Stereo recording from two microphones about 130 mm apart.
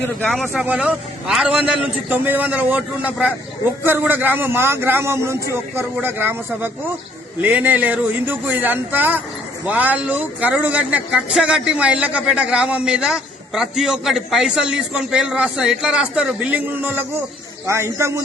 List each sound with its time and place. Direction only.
0.3 s a man's voice: centre (ahead or behind); by 18.1 s 20° right (ahead or behind)